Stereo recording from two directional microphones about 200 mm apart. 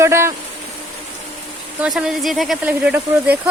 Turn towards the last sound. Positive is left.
turn(degrees=-5)  # may be behind; listen again after turning